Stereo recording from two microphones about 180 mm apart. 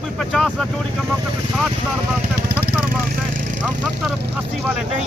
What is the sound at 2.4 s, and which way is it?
Vehicle, 65° right (ahead or behind).